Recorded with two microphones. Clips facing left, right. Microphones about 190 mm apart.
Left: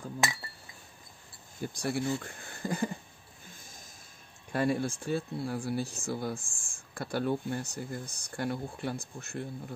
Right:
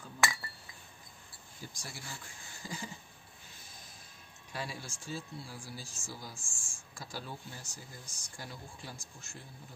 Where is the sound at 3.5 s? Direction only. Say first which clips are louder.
Left 2 dB; 45° left (ahead or behind).